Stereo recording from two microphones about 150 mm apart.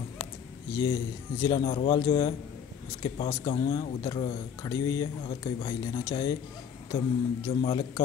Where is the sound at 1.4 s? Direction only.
30° left (ahead or behind).